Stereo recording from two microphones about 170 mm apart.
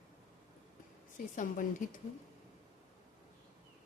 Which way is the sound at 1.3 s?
50° left (ahead or behind).